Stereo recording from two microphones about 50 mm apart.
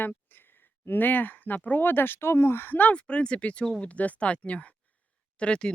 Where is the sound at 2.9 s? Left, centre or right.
Left.